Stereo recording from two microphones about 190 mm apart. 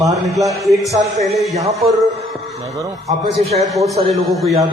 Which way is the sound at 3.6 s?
Centre (ahead or behind).